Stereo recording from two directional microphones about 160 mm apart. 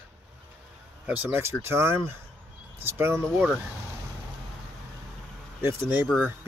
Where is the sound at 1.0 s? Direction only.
10° right (ahead or behind).